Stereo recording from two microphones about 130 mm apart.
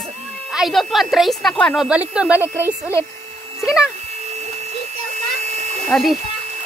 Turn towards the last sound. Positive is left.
turn(degrees=0)  # may be behind; listen again after turning